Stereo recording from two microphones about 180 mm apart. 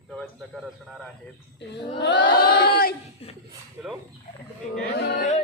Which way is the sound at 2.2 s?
50° left (ahead or behind).